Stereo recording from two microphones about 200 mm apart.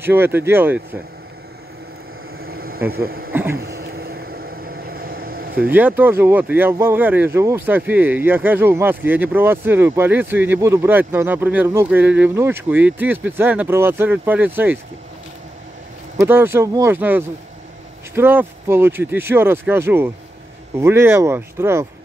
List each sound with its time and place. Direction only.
0.0 s speech: 10° right (ahead or behind)
2.3 s a sound: 50° right (ahead or behind)
2.9 s speech: 50° right (ahead or behind)
3.5 s vehicle: 50° right (ahead or behind)
5.6 s speech: 10° right (ahead or behind)
16.2 s speech: 10° right (ahead or behind)